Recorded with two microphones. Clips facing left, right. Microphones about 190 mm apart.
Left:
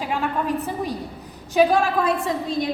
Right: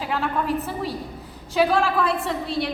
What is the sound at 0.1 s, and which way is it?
A woman's voice, 15° left (ahead or behind).